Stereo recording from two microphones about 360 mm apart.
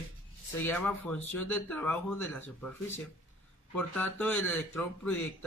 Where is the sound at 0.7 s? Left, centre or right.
Centre.